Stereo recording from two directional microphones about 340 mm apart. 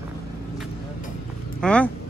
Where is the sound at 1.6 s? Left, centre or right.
Centre.